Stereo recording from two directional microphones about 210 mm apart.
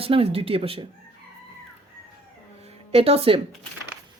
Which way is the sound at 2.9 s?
25° right (ahead or behind).